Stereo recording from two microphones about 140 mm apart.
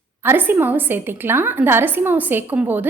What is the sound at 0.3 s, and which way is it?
A woman's voice, 15° right (ahead or behind).